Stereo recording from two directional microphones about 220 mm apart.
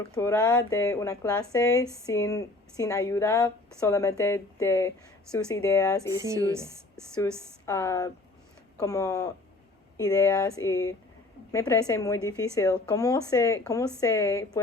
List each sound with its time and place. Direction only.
0.1 s speech: 10° left (ahead or behind)
6.1 s speech: 15° right (ahead or behind)
7.6 s speech: 15° left (ahead or behind)